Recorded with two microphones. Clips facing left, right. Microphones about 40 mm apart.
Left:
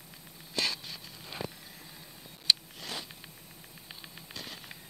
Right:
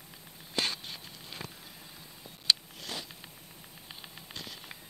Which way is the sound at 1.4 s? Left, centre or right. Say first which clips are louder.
Left 6 dB; centre.